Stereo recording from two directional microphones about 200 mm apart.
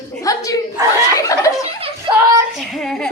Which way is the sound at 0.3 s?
15° left (ahead or behind).